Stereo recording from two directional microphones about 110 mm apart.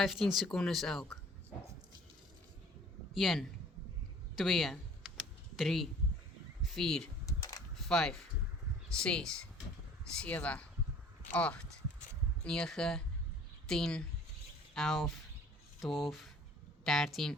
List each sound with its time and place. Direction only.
0.0 s speech: centre (ahead or behind)
3.2 s speech: centre (ahead or behind)
4.4 s computer keyboard: centre (ahead or behind)
6.6 s speech: centre (ahead or behind)
7.3 s a sound: 30° left (ahead or behind)
7.8 s a sound: 5° left (ahead or behind)
8.9 s speech: 10° left (ahead or behind)